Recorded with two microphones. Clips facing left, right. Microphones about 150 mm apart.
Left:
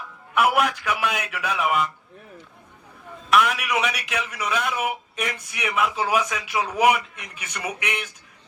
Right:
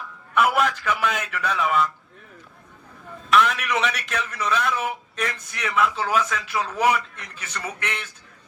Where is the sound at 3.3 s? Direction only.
10° left (ahead or behind).